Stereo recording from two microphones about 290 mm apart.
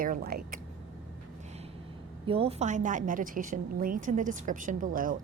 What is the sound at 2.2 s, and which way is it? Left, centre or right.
A woman's voice, centre.